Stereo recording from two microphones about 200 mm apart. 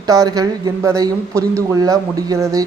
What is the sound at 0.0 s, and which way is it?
Speech, 20° right (ahead or behind).